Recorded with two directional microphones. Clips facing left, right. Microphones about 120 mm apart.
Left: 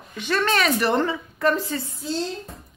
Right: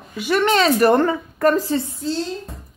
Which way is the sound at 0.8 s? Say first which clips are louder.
Right 7 dB; 50° right (ahead or behind).